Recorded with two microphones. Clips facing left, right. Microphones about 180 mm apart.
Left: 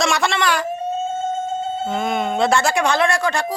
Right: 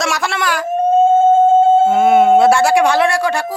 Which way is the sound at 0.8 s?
50° right (ahead or behind).